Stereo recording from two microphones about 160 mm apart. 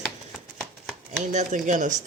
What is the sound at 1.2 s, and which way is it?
Speech, 50° right (ahead or behind).